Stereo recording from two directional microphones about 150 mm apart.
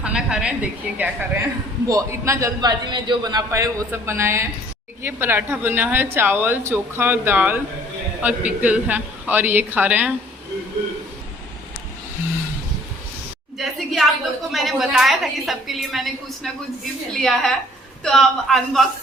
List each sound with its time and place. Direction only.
0.0 s a woman's voice: 5° right (ahead or behind)
13.6 s a woman's voice: centre (ahead or behind)